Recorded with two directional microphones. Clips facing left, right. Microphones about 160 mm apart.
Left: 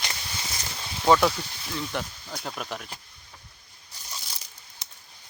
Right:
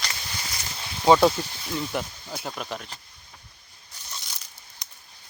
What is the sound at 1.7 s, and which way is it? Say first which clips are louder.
Speech: right 2 dB; 10° right (ahead or behind).